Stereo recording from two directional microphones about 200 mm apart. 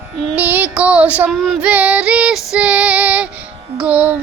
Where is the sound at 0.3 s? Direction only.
10° right (ahead or behind).